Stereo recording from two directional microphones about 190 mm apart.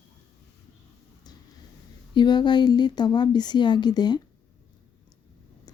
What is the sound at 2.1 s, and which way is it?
A woman's voice, 25° left (ahead or behind).